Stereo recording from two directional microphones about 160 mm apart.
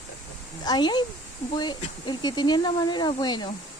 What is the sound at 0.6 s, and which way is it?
Speech, 25° left (ahead or behind).